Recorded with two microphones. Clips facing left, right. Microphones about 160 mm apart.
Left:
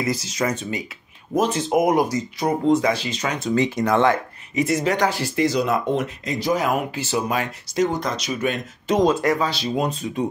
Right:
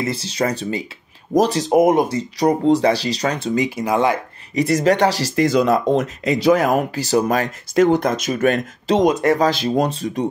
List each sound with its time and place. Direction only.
0.0 s speech: 30° right (ahead or behind)
3.5 s speech: 10° right (ahead or behind)
4.6 s speech: 40° right (ahead or behind)
5.3 s speech: 50° right (ahead or behind)
6.2 s speech: 70° right (ahead or behind)
6.7 s speech: 40° right (ahead or behind)
9.0 s speech: 20° right (ahead or behind)
9.4 s speech: 50° right (ahead or behind)
9.8 s speech: 35° right (ahead or behind)